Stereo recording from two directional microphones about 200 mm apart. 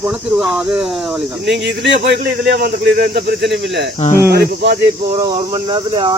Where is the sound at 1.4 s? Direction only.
60° right (ahead or behind).